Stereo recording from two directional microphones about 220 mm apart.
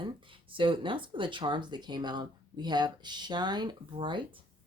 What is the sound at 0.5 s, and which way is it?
Speech, 20° right (ahead or behind).